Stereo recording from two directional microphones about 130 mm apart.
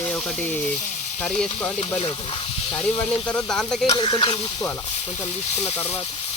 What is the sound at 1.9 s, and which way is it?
Speech, 45° left (ahead or behind).